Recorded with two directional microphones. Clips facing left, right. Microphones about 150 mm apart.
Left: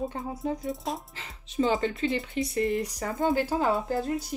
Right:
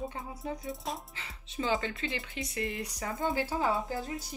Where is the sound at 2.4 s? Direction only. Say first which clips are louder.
Left 9 dB; 40° left (ahead or behind).